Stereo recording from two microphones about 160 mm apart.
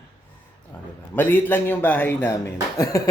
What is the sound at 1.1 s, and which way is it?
Speech, 10° left (ahead or behind).